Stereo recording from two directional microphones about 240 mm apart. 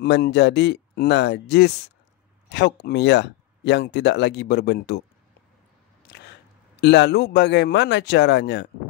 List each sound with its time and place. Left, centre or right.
0.0 s speech: left
6.0 s single-lens reflex camera: left
6.8 s speech: left